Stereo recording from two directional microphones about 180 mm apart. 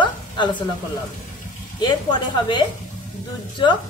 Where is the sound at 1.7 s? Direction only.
25° left (ahead or behind).